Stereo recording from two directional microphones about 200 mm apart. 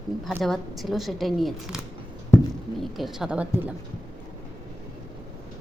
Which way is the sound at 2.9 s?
Centre (ahead or behind).